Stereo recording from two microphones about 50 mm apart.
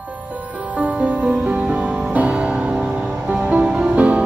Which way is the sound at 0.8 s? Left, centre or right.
Right.